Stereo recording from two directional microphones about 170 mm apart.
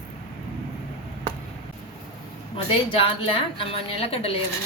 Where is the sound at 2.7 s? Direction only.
30° left (ahead or behind).